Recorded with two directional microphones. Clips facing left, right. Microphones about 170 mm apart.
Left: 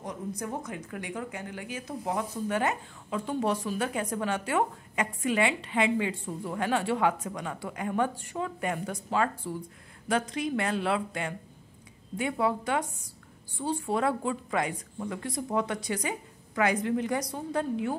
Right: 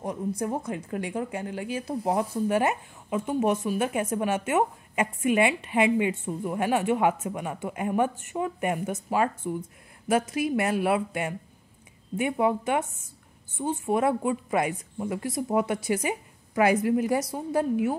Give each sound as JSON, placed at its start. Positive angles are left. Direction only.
{"t": 0.4, "sound": "speech", "side_deg": -30}